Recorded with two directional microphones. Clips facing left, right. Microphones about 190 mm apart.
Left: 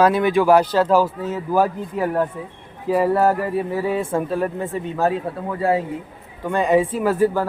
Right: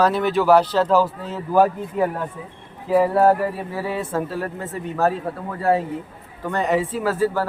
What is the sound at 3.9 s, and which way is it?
Speech, 20° left (ahead or behind).